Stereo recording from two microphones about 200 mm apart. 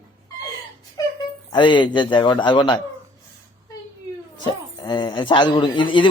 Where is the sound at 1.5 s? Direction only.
25° left (ahead or behind).